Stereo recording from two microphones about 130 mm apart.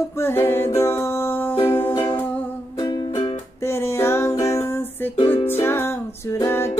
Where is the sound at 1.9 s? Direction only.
15° left (ahead or behind).